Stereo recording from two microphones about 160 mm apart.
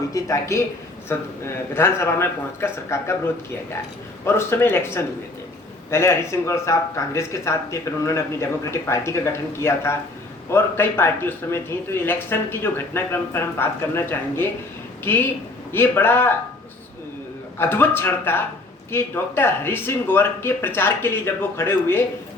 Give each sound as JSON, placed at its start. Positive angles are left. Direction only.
{"t": 0.1, "sound": "speech", "side_deg": 20}
{"t": 4.3, "sound": "speech", "side_deg": 15}
{"t": 17.6, "sound": "speech", "side_deg": 15}